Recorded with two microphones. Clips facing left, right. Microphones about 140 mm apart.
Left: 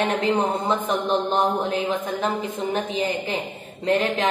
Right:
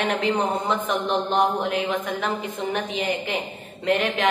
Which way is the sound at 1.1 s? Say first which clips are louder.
Even; 25° left (ahead or behind).